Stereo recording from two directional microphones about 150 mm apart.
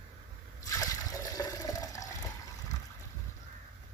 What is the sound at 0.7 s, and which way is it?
Trickle, 25° left (ahead or behind).